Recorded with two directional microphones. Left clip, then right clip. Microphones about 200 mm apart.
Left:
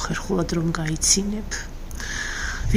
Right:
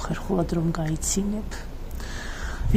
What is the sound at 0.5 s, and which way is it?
Speech, 5° right (ahead or behind).